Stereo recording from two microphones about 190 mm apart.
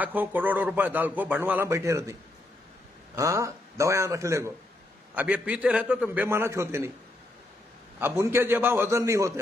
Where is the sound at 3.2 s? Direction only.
15° right (ahead or behind).